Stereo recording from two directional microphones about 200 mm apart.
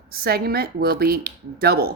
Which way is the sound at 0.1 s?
50° right (ahead or behind).